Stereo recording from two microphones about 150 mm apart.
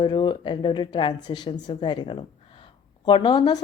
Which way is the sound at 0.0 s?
35° left (ahead or behind).